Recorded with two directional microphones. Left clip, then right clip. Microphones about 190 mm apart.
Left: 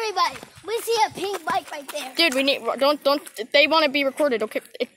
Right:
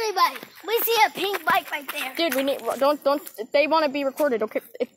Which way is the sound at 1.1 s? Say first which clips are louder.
Right 2 dB; 10° right (ahead or behind).